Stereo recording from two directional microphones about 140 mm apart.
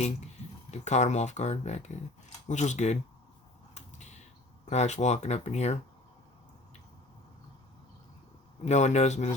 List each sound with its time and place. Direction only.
0.7 s speech: 55° left (ahead or behind)
3.8 s creak: 55° left (ahead or behind)
4.6 s speech: 55° left (ahead or behind)
8.6 s speech: 55° left (ahead or behind)